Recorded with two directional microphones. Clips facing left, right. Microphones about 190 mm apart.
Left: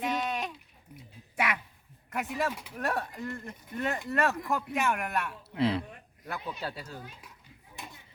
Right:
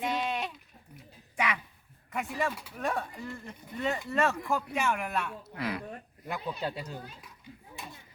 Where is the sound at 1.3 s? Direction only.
5° left (ahead or behind).